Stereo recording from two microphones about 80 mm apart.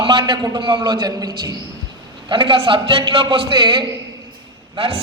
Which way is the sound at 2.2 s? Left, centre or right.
Right.